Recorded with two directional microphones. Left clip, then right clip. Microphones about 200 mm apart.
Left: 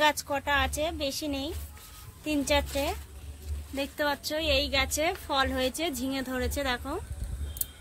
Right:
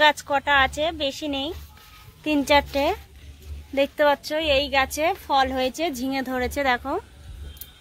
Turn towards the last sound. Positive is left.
turn(degrees=-40)  # may be behind; listen again after turning